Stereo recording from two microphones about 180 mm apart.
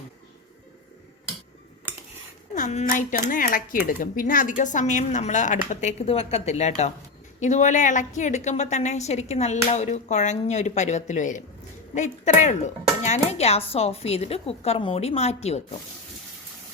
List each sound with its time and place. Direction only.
2.6 s a woman's voice: 45° left (ahead or behind)